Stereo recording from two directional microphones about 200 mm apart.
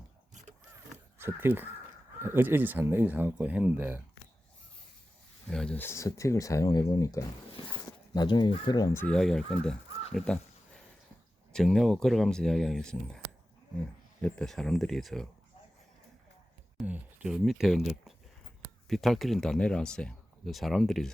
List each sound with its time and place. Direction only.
1.2 s speech: 10° right (ahead or behind)
5.5 s speech: 5° left (ahead or behind)
11.5 s speech: centre (ahead or behind)
16.7 s speech: 5° right (ahead or behind)